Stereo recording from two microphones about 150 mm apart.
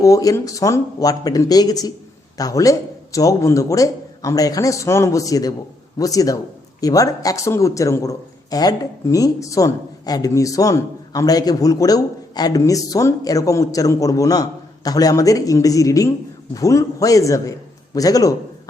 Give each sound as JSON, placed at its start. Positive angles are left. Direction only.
{"t": 0.0, "sound": "speech", "side_deg": 20}